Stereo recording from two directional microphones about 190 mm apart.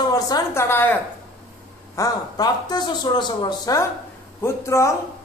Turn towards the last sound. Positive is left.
turn(degrees=15)  # may be behind; listen again after turning